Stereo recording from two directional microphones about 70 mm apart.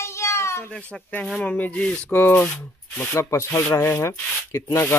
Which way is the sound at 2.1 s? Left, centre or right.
Left.